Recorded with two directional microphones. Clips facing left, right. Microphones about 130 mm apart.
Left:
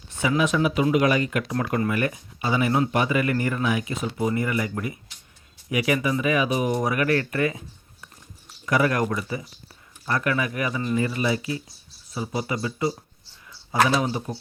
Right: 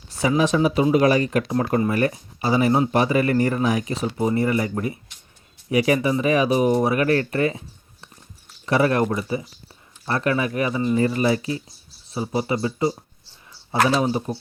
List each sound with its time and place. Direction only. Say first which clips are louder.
0.1 s speech: right 3 dB; 35° right (ahead or behind)
8.6 s speech: right 3 dB; 30° right (ahead or behind)